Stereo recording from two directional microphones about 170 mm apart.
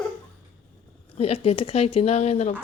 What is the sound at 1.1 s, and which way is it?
Speech, 35° left (ahead or behind).